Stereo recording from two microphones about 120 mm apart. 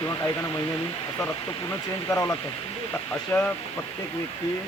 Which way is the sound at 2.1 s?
25° left (ahead or behind).